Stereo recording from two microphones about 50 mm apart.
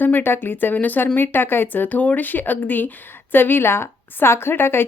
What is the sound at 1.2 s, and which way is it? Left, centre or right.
Speech, left.